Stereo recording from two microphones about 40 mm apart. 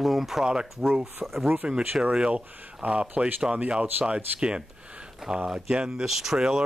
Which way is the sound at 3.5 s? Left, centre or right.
Centre.